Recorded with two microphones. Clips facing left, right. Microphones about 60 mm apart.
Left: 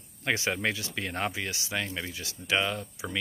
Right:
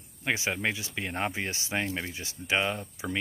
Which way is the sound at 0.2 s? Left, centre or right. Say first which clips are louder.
Left 1 dB; centre.